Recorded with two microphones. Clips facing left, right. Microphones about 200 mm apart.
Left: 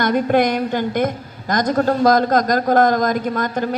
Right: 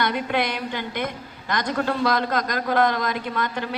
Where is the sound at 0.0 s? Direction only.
45° left (ahead or behind).